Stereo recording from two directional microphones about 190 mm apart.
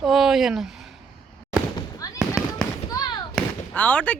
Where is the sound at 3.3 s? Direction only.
5° left (ahead or behind).